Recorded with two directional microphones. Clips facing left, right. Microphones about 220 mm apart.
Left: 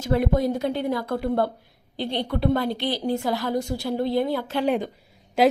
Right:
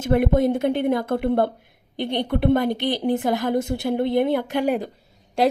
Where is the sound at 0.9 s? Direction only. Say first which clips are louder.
Right 3 dB; 20° right (ahead or behind).